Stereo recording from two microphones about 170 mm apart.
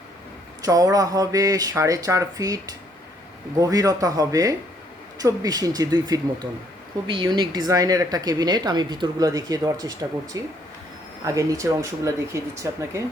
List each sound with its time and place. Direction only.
0.6 s speech: 20° right (ahead or behind)